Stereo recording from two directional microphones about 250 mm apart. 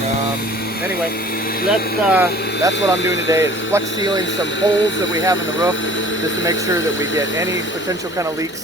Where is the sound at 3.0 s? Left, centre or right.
Left.